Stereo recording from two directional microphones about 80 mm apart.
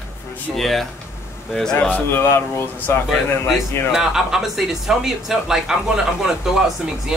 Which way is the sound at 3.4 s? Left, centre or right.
Centre.